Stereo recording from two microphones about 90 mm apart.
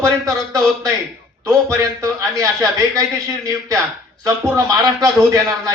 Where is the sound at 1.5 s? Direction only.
40° right (ahead or behind).